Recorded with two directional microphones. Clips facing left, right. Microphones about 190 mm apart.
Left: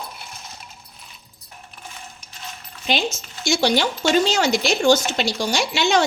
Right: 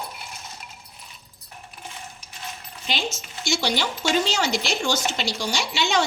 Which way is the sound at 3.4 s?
50° left (ahead or behind).